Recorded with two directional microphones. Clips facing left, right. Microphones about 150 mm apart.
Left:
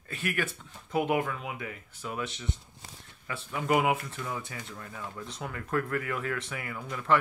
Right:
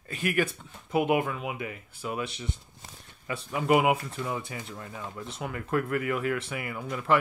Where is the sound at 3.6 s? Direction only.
25° right (ahead or behind).